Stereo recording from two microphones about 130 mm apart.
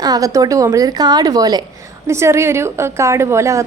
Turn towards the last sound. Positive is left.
turn(degrees=-20)  # may be behind; listen again after turning